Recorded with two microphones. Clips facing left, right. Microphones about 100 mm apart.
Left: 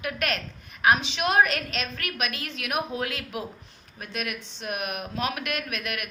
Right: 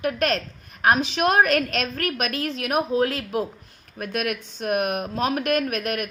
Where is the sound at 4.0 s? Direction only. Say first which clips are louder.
Right 7 dB; 50° right (ahead or behind).